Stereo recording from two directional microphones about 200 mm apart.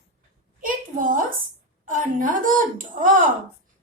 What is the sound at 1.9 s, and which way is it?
Speech, 40° right (ahead or behind).